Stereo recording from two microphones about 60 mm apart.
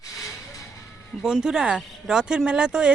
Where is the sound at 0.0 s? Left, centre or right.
Left.